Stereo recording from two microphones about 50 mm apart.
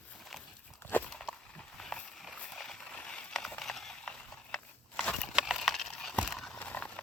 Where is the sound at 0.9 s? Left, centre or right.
Left.